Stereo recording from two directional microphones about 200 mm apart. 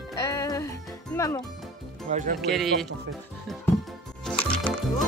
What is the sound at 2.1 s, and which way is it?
Speech, 40° right (ahead or behind).